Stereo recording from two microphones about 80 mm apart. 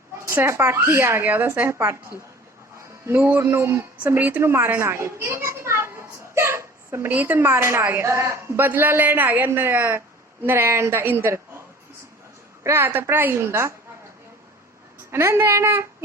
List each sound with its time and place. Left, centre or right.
0.3 s a child's voice: right
1.2 s a woman's voice: right
3.1 s a woman's voice: right
4.0 s a child's voice: right
6.3 s hiccup: right
7.1 s a woman's voice: right
12.6 s a woman's voice: right
15.1 s a child's voice: right